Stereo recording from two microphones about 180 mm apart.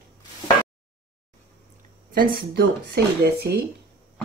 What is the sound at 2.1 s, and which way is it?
Speech, 60° right (ahead or behind).